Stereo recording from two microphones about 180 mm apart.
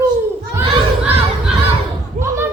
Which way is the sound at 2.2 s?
15° right (ahead or behind).